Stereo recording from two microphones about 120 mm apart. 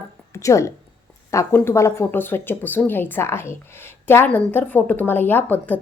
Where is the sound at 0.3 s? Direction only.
25° left (ahead or behind).